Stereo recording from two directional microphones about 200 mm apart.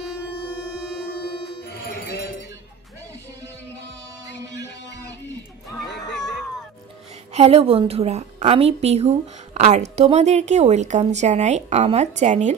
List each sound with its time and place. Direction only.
1.0 s music: 50° left (ahead or behind)
4.6 s music: 60° left (ahead or behind)
7.3 s a woman's voice: 30° right (ahead or behind)